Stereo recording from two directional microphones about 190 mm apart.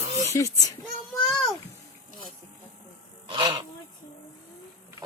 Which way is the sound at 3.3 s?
25° right (ahead or behind).